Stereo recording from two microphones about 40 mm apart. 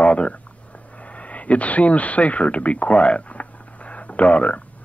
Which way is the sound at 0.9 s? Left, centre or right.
Left.